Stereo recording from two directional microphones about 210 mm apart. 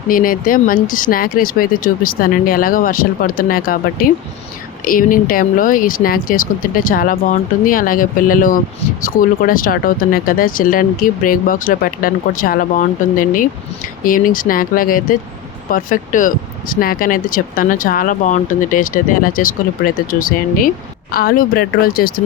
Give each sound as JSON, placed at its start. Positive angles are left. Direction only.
{"t": 0.1, "sound": "speech", "side_deg": 40}